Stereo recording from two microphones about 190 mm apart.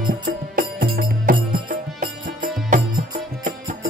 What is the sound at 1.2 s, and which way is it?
Music, 45° right (ahead or behind).